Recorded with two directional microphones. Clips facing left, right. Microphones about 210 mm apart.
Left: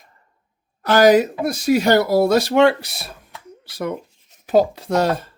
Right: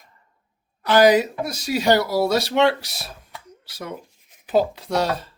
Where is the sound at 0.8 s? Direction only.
45° left (ahead or behind).